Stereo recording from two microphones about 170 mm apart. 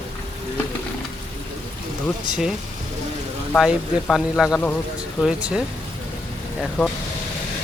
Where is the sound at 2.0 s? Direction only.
Centre (ahead or behind).